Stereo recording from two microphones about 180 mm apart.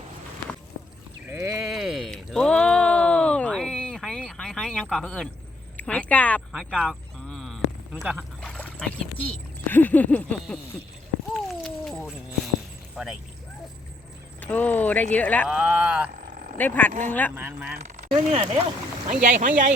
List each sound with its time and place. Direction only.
1.3 s sheep: 15° right (ahead or behind)
1.5 s a sound: 5° right (ahead or behind)
8.4 s speech: 5° left (ahead or behind)
11.3 s cat: centre (ahead or behind)
13.0 s vehicle: 5° right (ahead or behind)
14.4 s speech: 10° left (ahead or behind)
15.4 s speech: 5° right (ahead or behind)
16.2 s vehicle: 45° right (ahead or behind)
16.6 s speech: 10° left (ahead or behind)
17.3 s speech: 10° right (ahead or behind)
18.1 s speech: 30° right (ahead or behind)
19.0 s speech: 45° right (ahead or behind)